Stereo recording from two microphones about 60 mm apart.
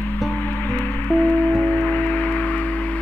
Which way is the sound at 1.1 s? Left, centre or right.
Left.